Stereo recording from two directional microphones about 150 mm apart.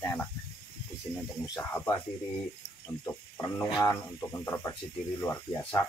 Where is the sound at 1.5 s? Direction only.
15° left (ahead or behind).